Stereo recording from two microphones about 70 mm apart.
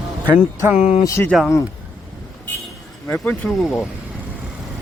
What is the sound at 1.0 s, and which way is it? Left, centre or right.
Speech, left.